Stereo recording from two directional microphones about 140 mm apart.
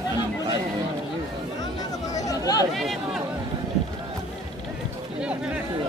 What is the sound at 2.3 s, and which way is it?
Chatter, 25° left (ahead or behind).